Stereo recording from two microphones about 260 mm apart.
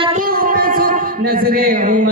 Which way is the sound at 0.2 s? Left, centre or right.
Right.